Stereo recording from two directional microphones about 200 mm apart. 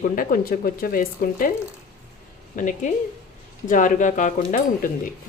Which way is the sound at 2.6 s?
40° left (ahead or behind).